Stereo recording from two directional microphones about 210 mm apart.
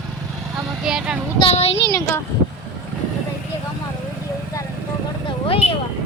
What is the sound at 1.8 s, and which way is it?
Speech, 15° left (ahead or behind).